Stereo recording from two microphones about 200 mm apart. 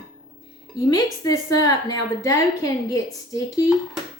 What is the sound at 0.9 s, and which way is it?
A woman's voice, 20° left (ahead or behind).